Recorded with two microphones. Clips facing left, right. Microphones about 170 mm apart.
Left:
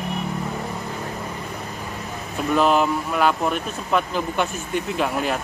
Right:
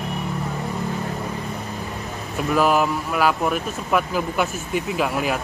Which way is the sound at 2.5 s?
5° right (ahead or behind).